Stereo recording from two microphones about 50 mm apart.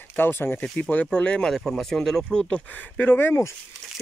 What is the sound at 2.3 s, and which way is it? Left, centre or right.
Speech, centre.